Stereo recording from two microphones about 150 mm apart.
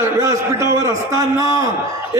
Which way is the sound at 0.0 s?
20° right (ahead or behind).